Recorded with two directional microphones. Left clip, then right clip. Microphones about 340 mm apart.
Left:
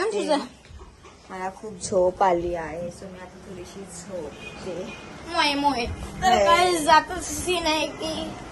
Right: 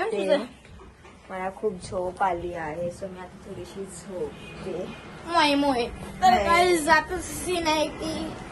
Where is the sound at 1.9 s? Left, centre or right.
Left.